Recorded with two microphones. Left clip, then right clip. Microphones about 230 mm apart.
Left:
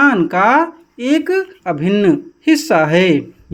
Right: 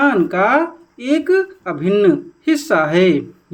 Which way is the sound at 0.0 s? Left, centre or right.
Left.